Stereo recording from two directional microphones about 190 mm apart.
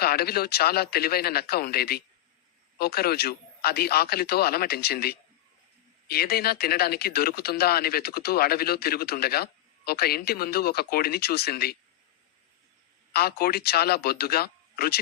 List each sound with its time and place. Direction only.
0.0 s speech: 55° left (ahead or behind)
13.1 s speech: 55° left (ahead or behind)